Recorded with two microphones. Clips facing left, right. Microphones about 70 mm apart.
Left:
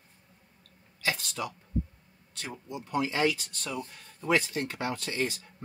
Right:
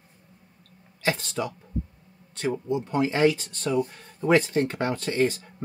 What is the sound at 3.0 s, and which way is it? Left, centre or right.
Speech, right.